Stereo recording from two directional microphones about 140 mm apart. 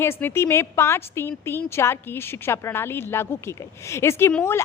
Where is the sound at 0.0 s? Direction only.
15° left (ahead or behind).